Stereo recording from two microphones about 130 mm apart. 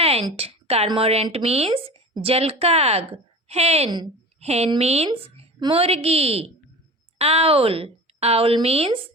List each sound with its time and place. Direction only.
0.0 s a sound: 50° right (ahead or behind)
0.3 s a woman's voice: 50° right (ahead or behind)
3.8 s a woman's voice: 35° right (ahead or behind)
4.4 s a woman's voice: 55° right (ahead or behind)
5.5 s a woman's voice: 35° right (ahead or behind)
5.8 s a woman's voice: 50° right (ahead or behind)